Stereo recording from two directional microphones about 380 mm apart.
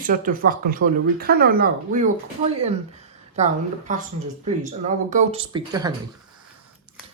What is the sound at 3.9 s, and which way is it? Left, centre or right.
Speech, centre.